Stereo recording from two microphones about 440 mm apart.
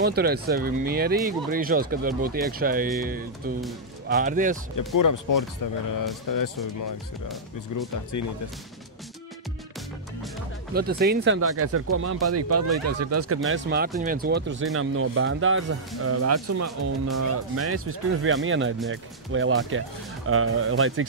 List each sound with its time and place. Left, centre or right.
0.0 s speech: right
4.7 s speech: left
10.7 s speech: right
13.5 s speech: right